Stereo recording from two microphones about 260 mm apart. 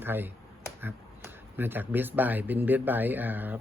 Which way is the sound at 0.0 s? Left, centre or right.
Centre.